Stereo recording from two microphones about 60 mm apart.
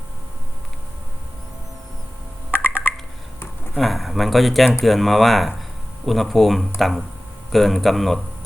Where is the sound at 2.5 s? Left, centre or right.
Right.